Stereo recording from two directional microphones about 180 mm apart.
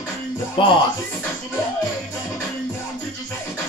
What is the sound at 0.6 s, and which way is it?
Speech, 30° left (ahead or behind).